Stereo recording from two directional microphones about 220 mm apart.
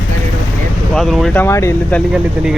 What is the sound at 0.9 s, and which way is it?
Speech, centre (ahead or behind).